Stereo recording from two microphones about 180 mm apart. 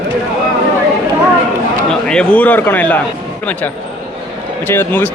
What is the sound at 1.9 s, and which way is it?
A man's voice, 5° left (ahead or behind).